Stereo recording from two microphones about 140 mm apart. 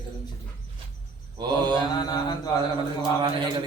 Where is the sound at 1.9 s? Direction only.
30° left (ahead or behind).